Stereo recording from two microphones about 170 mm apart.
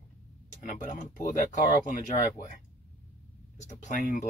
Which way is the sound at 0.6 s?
50° left (ahead or behind).